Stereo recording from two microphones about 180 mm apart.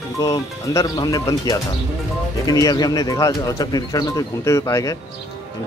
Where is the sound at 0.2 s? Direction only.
20° left (ahead or behind).